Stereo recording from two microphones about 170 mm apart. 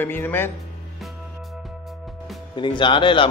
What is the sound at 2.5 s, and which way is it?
Speech, 30° left (ahead or behind).